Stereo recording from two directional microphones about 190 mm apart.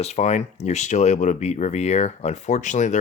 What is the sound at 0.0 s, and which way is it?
Speech, 35° left (ahead or behind).